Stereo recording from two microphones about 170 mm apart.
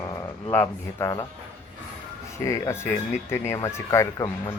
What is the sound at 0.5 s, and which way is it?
Speech, 15° left (ahead or behind).